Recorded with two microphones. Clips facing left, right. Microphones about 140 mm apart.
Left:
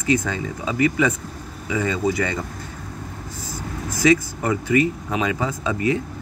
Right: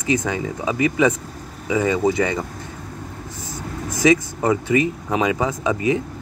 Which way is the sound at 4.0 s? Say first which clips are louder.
Right 1 dB; 20° right (ahead or behind).